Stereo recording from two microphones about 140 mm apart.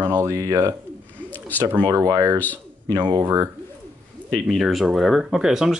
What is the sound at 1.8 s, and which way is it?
Speech, 20° right (ahead or behind).